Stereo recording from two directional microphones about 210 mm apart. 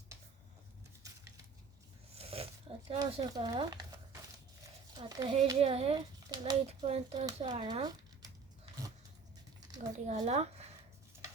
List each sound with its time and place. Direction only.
2.1 s a sound: 30° right (ahead or behind)
2.8 s speech: 20° right (ahead or behind)
4.9 s a child's voice: 20° right (ahead or behind)
9.7 s speech: 35° right (ahead or behind)